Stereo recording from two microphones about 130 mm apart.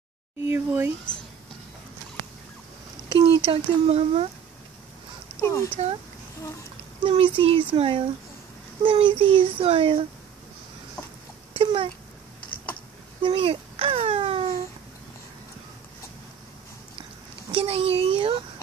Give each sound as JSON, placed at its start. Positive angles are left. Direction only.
{"t": 0.4, "sound": "speech", "side_deg": -15}
{"t": 3.2, "sound": "speech", "side_deg": -45}
{"t": 5.4, "sound": "speech", "side_deg": 20}
{"t": 7.0, "sound": "a child's voice", "side_deg": -40}
{"t": 11.5, "sound": "a child's voice", "side_deg": -45}
{"t": 13.2, "sound": "a child's voice", "side_deg": -40}
{"t": 17.5, "sound": "a child's voice", "side_deg": -45}